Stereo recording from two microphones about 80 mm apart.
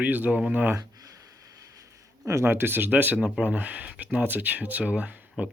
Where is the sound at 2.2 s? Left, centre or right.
Right.